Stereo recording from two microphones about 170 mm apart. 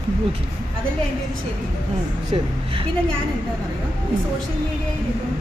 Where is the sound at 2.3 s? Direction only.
35° right (ahead or behind).